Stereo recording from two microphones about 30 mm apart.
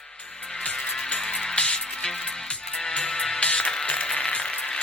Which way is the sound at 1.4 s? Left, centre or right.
Left.